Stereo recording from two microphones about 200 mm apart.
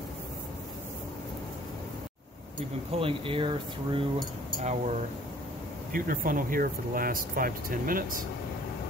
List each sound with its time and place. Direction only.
3.0 s speech: 25° right (ahead or behind)
5.9 s speech: 45° right (ahead or behind)